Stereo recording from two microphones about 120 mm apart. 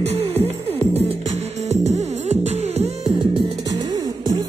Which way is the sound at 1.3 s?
65° right (ahead or behind).